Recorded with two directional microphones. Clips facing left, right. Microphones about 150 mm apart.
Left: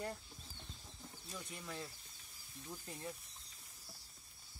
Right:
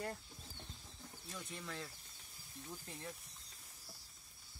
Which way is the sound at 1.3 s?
10° left (ahead or behind).